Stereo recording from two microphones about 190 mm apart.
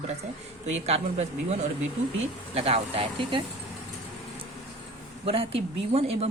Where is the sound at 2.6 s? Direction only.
30° right (ahead or behind).